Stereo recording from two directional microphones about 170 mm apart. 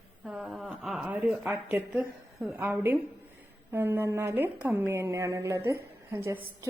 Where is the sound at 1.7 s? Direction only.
5° right (ahead or behind).